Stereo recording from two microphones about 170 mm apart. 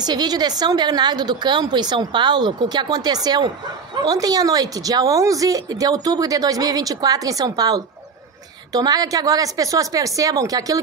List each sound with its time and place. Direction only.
0.0 s speech: 25° right (ahead or behind)